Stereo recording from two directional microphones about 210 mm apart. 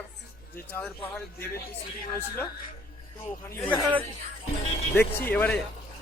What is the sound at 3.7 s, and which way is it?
Speech, centre (ahead or behind).